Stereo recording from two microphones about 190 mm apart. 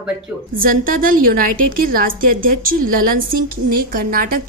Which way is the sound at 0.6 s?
50° right (ahead or behind).